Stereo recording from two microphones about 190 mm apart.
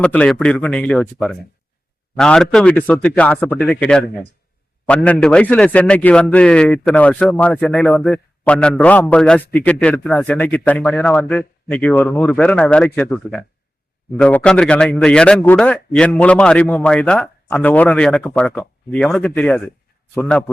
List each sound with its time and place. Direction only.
0.0 s a man's voice: 5° left (ahead or behind)